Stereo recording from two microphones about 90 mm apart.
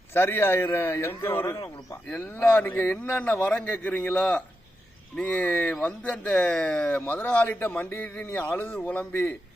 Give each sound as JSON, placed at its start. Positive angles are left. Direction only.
{"t": 0.1, "sound": "a man's voice", "side_deg": 25}
{"t": 7.0, "sound": "a man's voice", "side_deg": 20}